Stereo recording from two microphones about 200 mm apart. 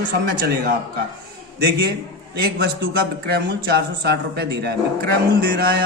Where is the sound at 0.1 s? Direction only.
50° right (ahead or behind).